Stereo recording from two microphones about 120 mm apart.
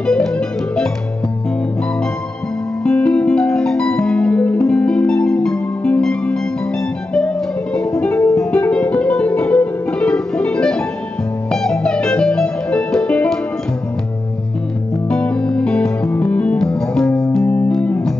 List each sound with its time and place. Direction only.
0.0 s music: 5° left (ahead or behind)
2.8 s music: 10° left (ahead or behind)
8.0 s music: 15° left (ahead or behind)
15.0 s music: 10° left (ahead or behind)
17.4 s music: 15° left (ahead or behind)